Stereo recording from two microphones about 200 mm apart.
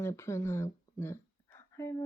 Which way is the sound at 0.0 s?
15° left (ahead or behind).